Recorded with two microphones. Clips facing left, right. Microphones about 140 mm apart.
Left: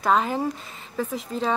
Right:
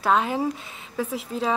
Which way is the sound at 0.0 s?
Centre (ahead or behind).